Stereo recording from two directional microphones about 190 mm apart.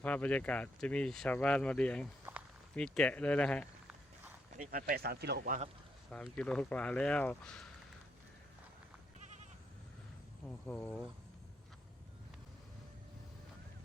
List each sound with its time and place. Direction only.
0.0 s speech: 5° left (ahead or behind)
4.5 s speech: 45° right (ahead or behind)
6.1 s speech: 5° left (ahead or behind)
10.4 s speech: 10° left (ahead or behind)